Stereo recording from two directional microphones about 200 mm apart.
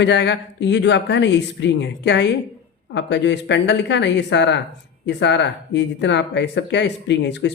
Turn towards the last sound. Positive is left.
turn(degrees=60)  # may be behind; listen again after turning